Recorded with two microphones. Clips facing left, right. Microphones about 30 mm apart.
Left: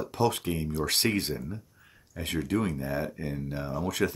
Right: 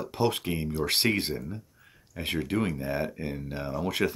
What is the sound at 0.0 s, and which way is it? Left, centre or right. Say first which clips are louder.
Speech: even; centre.